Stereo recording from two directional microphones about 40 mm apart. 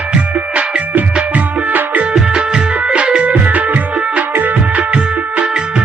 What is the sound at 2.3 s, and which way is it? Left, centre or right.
Music, right.